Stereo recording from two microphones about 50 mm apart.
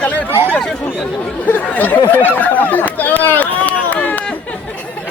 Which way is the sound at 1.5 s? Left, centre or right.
Left.